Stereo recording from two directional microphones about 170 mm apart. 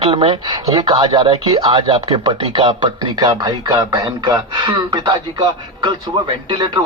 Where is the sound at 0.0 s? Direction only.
30° right (ahead or behind).